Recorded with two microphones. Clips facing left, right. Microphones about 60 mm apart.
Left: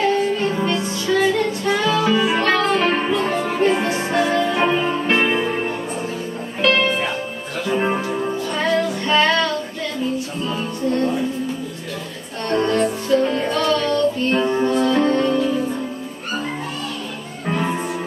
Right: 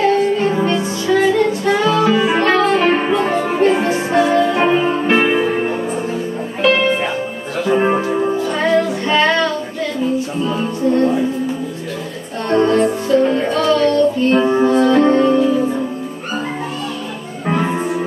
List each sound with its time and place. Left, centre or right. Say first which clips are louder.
0.1 s music: right 4 dB; centre
8.4 s music: right 2 dB; centre
12.4 s music: right 5 dB; centre
17.5 s music: right 4 dB; centre